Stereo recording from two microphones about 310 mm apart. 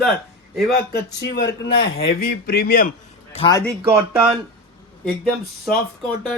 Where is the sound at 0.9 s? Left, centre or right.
Left.